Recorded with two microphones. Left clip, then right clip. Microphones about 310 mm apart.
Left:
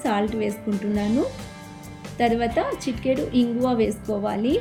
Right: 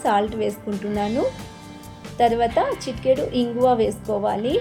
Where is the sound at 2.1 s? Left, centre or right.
Centre.